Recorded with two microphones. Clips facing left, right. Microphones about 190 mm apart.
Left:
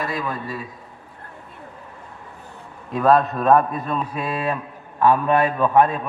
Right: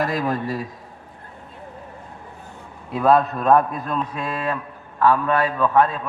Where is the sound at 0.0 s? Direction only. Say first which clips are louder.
Right 4 dB; 40° right (ahead or behind).